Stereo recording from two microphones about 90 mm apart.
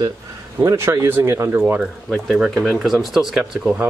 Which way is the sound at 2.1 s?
Centre (ahead or behind).